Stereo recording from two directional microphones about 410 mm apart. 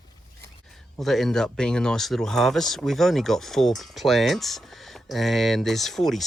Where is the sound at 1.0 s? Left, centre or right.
Centre.